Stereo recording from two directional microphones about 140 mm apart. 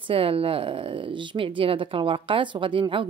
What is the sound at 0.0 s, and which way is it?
Speech, 40° right (ahead or behind).